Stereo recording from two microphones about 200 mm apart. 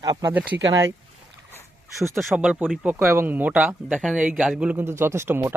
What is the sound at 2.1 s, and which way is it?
A man's voice, 5° right (ahead or behind).